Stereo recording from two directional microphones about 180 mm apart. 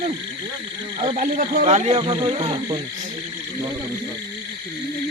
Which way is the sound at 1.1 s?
45° right (ahead or behind).